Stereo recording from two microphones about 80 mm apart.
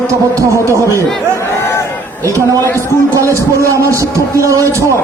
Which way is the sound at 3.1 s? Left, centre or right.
Right.